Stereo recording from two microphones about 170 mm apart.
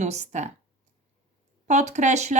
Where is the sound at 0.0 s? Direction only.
45° right (ahead or behind).